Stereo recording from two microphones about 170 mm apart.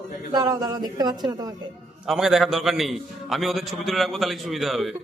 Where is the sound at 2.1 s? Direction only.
5° right (ahead or behind).